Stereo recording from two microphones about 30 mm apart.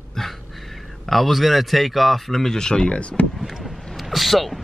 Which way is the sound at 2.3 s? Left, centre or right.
Centre.